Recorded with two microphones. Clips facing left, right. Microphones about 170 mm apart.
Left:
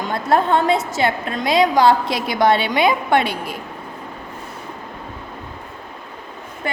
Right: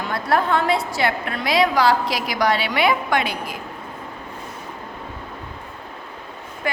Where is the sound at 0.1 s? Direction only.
20° left (ahead or behind).